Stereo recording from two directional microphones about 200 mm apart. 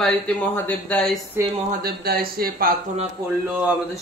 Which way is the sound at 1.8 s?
50° right (ahead or behind).